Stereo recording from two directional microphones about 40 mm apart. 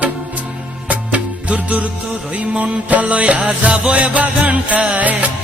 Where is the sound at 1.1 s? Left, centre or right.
Right.